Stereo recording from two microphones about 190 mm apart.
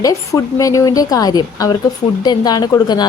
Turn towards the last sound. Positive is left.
turn(degrees=20)  # may be behind; listen again after turning